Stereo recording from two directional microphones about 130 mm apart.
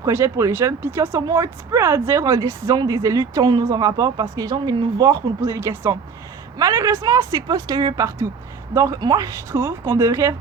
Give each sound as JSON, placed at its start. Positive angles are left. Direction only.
{"t": 0.0, "sound": "speech", "side_deg": -20}